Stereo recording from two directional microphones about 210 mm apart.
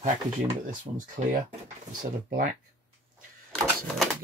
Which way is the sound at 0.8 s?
35° right (ahead or behind).